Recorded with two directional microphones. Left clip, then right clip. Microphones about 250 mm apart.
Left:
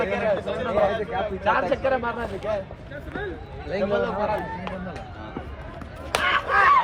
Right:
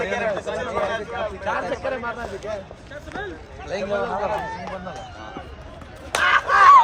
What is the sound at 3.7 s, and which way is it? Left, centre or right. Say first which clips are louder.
Speech: left 2 dB; right.